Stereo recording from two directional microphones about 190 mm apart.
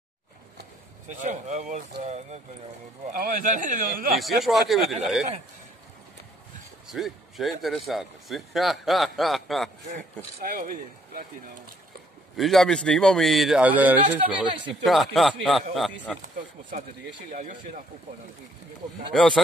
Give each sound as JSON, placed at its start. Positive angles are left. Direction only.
{"t": 1.1, "sound": "a man's voice", "side_deg": -40}
{"t": 4.2, "sound": "speech", "side_deg": 0}
{"t": 6.9, "sound": "speech", "side_deg": 0}
{"t": 10.4, "sound": "a man's voice", "side_deg": -45}
{"t": 12.4, "sound": "speech", "side_deg": 0}
{"t": 17.3, "sound": "a man's voice", "side_deg": -45}
{"t": 19.1, "sound": "speech", "side_deg": 5}